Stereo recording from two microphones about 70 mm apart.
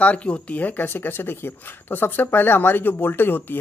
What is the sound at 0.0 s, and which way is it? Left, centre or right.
Speech, centre.